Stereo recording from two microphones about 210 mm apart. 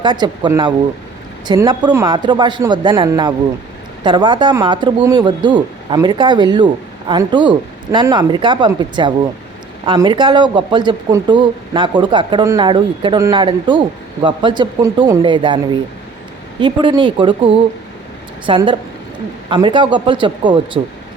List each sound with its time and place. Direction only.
0.0 s speech: 20° right (ahead or behind)